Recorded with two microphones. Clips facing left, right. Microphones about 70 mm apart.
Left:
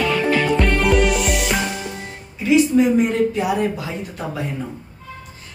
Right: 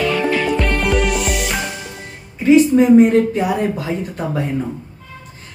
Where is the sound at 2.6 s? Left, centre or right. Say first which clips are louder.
Right 5 dB; right.